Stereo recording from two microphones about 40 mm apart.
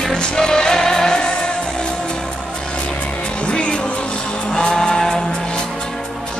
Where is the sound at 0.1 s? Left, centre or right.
Centre.